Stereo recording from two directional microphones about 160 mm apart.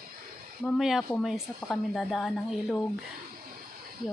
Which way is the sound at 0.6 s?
Centre (ahead or behind).